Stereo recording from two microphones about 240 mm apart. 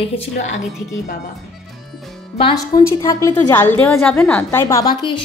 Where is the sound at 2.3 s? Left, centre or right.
Centre.